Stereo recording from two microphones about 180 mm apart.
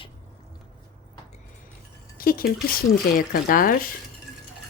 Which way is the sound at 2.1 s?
55° left (ahead or behind).